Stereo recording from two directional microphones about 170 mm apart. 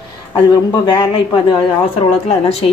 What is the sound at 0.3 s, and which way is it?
A man's voice, 25° left (ahead or behind).